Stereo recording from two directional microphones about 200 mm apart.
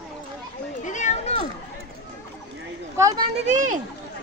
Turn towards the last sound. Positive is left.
turn(degrees=-35)  # may be behind; listen again after turning